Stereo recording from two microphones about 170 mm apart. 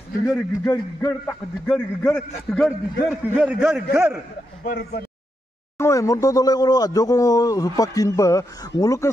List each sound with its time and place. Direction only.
0.3 s a man's voice: 15° left (ahead or behind)
3.9 s a man's voice: 15° right (ahead or behind)
4.6 s speech: 70° left (ahead or behind)
5.8 s speech: 20° left (ahead or behind)